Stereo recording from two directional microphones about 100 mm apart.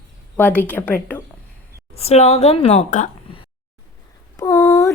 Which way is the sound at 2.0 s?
90° left.